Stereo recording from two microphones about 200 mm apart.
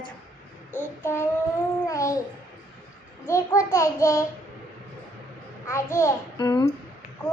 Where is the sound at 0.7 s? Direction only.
10° left (ahead or behind).